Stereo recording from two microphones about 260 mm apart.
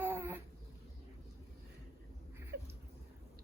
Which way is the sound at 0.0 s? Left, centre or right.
Centre.